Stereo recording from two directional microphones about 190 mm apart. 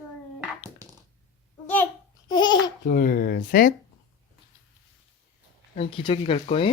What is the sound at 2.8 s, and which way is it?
Speech, 50° left (ahead or behind).